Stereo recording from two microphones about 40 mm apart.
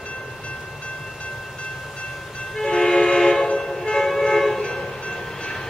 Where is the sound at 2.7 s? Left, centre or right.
Centre.